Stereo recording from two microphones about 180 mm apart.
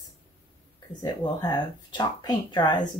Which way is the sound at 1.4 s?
25° left (ahead or behind).